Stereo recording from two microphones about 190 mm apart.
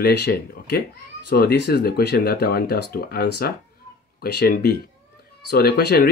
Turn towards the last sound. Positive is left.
turn(degrees=55)  # may be behind; listen again after turning